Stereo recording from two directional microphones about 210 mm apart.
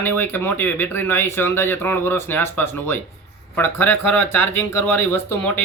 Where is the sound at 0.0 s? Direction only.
10° left (ahead or behind).